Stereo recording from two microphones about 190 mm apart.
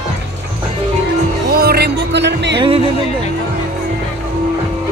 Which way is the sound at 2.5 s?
30° right (ahead or behind).